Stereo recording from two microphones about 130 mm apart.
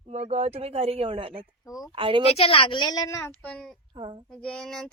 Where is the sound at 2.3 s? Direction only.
45° left (ahead or behind); by 3.3 s 25° left (ahead or behind).